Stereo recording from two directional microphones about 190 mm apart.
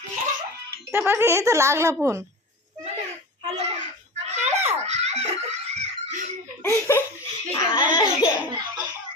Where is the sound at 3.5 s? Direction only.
35° right (ahead or behind).